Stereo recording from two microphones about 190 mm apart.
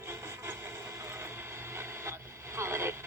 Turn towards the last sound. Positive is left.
turn(degrees=-15)  # may be behind; listen again after turning